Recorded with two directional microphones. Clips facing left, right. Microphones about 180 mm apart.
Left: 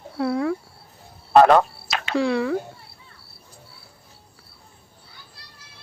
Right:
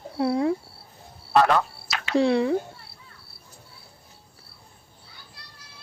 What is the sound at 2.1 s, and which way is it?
Speech, 20° right (ahead or behind).